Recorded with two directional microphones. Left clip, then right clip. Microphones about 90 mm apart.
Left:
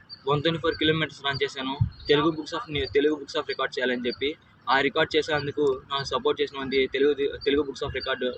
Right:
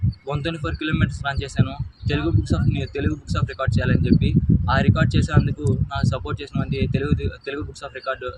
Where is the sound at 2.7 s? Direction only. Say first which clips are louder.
Left 4 dB; 50° right (ahead or behind).